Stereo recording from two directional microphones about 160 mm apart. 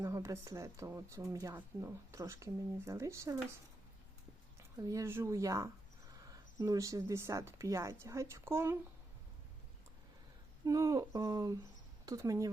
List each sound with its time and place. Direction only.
0.0 s speech: 20° right (ahead or behind)
4.8 s speech: 20° right (ahead or behind)
10.7 s speech: 20° right (ahead or behind)